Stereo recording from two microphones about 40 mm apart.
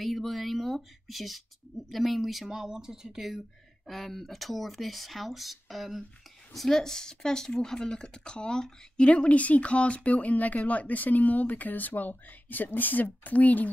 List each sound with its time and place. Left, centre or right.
0.0 s a sound: centre
1.0 s speech: centre
2.5 s speech: centre
3.8 s speech: centre
6.5 s speech: centre
9.0 s a woman's voice: left